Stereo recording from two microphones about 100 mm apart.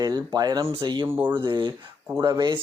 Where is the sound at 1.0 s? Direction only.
20° right (ahead or behind).